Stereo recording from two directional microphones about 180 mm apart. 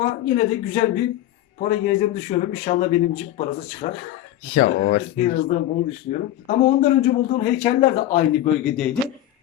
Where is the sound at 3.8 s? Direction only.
40° left (ahead or behind).